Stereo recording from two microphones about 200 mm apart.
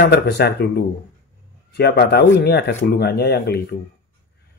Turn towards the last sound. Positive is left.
turn(degrees=55)  # may be behind; listen again after turning